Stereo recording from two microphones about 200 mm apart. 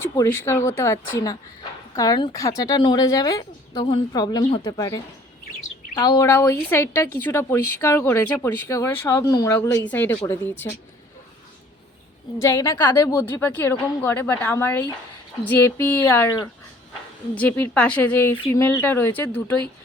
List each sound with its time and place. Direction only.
0.0 s speech: 15° left (ahead or behind)
2.0 s speech: 20° left (ahead or behind)
6.0 s speech: 15° left (ahead or behind)
12.4 s speech: 15° left (ahead or behind)